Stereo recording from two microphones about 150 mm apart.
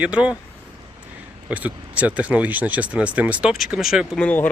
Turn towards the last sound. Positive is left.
turn(degrees=10)  # may be behind; listen again after turning